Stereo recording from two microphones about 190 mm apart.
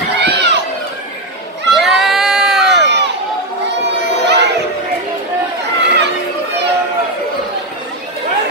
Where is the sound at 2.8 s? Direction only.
65° right (ahead or behind).